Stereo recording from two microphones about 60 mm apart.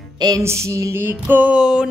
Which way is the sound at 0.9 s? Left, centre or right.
Right.